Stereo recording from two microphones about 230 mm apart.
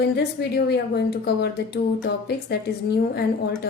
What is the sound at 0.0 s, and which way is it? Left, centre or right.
A woman's voice, left.